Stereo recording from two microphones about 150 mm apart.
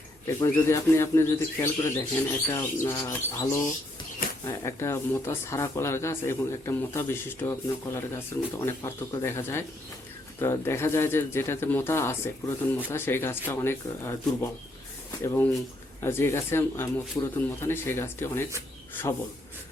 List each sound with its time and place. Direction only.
0.3 s speech: 20° left (ahead or behind)
15.2 s speech: 15° left (ahead or behind)